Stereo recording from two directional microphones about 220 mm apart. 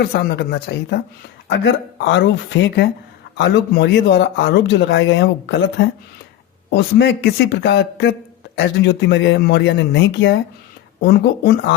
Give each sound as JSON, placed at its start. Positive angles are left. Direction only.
{"t": 0.0, "sound": "speech", "side_deg": 45}